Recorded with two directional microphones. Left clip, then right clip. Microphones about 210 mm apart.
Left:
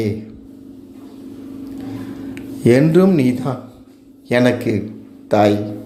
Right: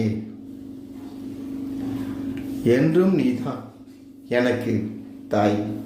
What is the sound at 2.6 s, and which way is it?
A man's voice, 40° left (ahead or behind).